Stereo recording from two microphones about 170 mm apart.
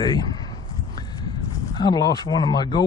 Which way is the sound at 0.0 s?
25° left (ahead or behind).